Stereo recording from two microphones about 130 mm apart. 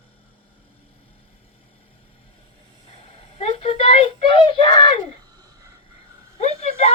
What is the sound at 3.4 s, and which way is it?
Speech, 50° left (ahead or behind).